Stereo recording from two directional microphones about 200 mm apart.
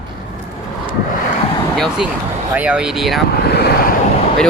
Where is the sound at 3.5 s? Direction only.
55° left (ahead or behind).